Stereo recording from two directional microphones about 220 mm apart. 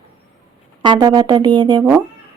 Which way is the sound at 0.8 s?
20° right (ahead or behind).